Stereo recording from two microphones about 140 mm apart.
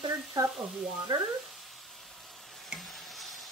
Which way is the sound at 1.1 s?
30° right (ahead or behind).